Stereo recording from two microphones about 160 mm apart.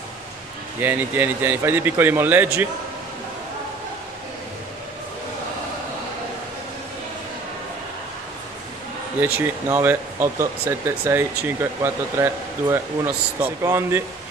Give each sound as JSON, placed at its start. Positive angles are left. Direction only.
{"t": 0.7, "sound": "speech", "side_deg": -15}
{"t": 9.7, "sound": "speech", "side_deg": -15}